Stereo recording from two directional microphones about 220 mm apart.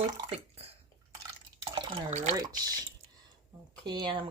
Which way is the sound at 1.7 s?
30° right (ahead or behind).